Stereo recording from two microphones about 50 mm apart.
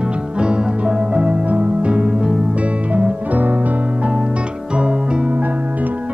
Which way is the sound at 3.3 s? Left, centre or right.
Right.